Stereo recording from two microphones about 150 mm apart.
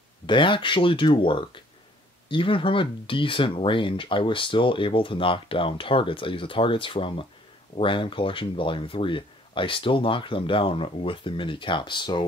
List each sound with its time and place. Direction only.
0.3 s speech: 35° left (ahead or behind)